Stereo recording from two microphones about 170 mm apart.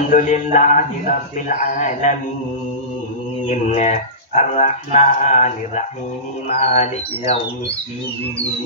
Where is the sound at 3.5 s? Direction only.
45° left (ahead or behind).